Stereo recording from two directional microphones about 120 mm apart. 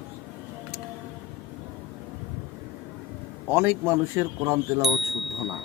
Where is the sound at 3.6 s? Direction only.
20° right (ahead or behind).